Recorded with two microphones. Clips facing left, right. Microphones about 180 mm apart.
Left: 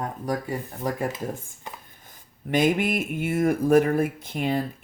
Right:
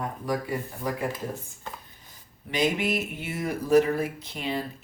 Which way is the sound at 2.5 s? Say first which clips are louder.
Left 4 dB; 50° left (ahead or behind).